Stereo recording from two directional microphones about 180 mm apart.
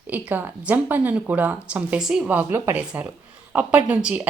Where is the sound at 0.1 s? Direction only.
10° right (ahead or behind).